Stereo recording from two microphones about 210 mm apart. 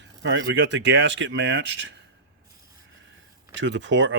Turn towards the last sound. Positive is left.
turn(degrees=-60)  # may be behind; listen again after turning